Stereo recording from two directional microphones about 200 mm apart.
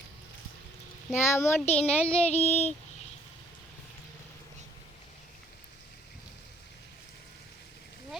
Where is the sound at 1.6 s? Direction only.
30° left (ahead or behind).